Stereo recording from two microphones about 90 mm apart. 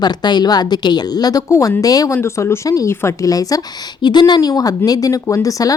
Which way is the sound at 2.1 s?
30° left (ahead or behind).